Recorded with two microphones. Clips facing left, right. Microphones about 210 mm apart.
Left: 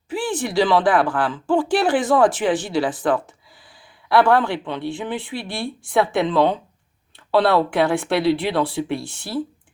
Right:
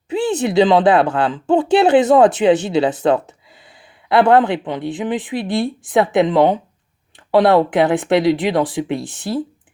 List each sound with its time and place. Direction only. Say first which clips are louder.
0.1 s speech: right 6 dB; 20° right (ahead or behind)